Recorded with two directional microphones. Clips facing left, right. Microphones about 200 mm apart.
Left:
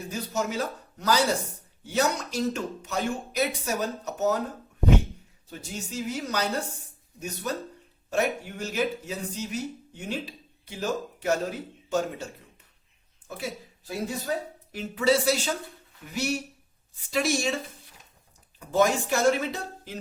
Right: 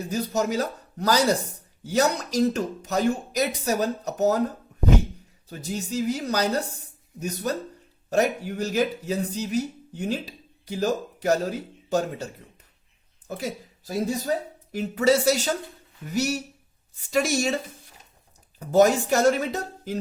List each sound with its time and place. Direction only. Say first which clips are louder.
0.1 s speech: right 5 dB; 40° right (ahead or behind)
5.5 s a woman's voice: right 6 dB; 40° right (ahead or behind)
18.7 s speech: right 5 dB; 40° right (ahead or behind)